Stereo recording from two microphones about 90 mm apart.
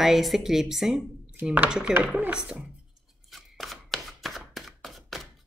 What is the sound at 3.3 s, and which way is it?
Chopping, centre (ahead or behind).